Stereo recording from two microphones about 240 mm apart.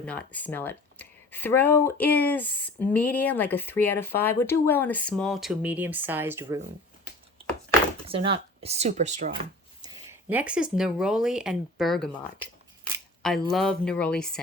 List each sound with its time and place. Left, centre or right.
0.0 s speech: centre
8.0 s speech: right
9.8 s speech: centre
13.5 s speech: centre